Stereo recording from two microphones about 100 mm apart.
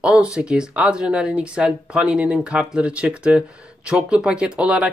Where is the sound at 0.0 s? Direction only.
10° right (ahead or behind).